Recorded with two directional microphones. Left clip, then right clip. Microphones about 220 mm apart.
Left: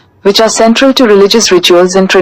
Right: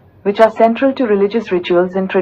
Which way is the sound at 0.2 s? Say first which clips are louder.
Left 4 dB; 60° left (ahead or behind).